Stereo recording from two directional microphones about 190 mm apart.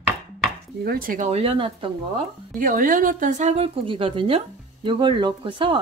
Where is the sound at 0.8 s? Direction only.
50° right (ahead or behind); by 2.2 s 30° right (ahead or behind).